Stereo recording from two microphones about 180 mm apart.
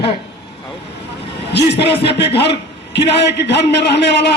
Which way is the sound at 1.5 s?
70° left (ahead or behind).